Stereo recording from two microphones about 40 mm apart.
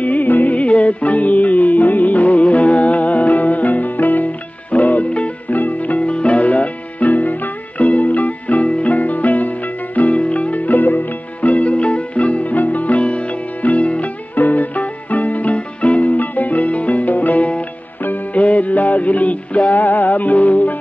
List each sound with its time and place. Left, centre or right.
0.0 s music: left
0.6 s music: left
14.3 s music: left